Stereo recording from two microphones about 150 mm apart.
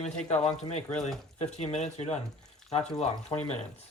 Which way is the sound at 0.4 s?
45° left (ahead or behind).